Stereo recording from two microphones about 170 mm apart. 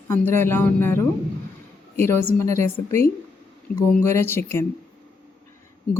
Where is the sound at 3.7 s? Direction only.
55° left (ahead or behind).